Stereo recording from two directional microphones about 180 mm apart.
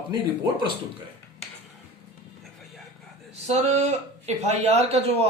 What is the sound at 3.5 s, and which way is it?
A man's voice, 40° right (ahead or behind).